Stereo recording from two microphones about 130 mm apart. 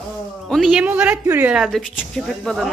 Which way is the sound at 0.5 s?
5° right (ahead or behind).